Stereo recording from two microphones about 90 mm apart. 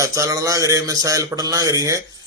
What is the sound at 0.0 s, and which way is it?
Speech, 35° right (ahead or behind).